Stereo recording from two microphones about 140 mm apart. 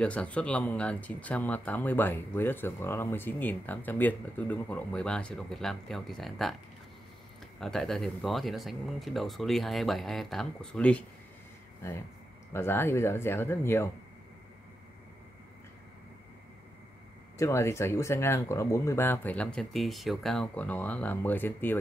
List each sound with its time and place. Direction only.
0.0 s speech: 10° left (ahead or behind)
7.6 s speech: centre (ahead or behind)
12.5 s speech: 15° left (ahead or behind)
17.4 s speech: 20° left (ahead or behind)